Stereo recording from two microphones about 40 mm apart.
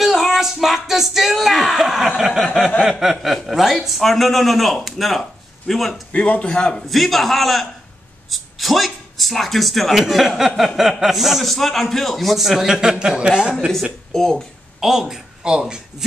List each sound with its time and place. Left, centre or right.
0.0 s a man's voice: centre
6.1 s a man's voice: left
6.5 s a man's voice: left
6.9 s a man's voice: centre
14.1 s speech: centre
14.8 s speech: centre